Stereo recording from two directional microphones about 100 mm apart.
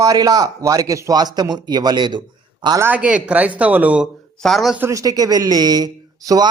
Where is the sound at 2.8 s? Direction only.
15° right (ahead or behind).